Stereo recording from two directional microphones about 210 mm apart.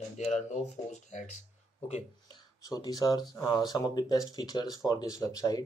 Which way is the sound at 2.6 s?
15° left (ahead or behind).